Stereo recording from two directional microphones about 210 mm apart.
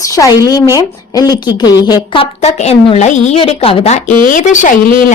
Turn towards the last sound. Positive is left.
turn(degrees=40)  # may be behind; listen again after turning